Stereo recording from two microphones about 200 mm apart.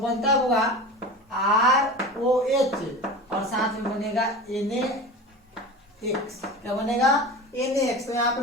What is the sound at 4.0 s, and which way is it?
Speech, centre (ahead or behind).